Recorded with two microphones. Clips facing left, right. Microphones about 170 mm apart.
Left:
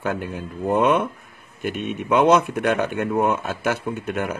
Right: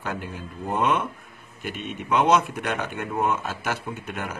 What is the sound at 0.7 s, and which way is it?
Speech, 55° left (ahead or behind).